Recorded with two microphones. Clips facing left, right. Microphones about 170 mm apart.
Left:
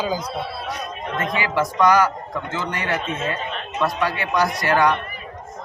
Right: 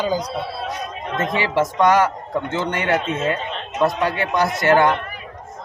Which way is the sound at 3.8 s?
25° right (ahead or behind).